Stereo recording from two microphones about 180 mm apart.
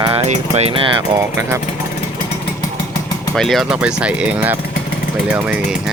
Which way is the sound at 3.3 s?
Centre (ahead or behind).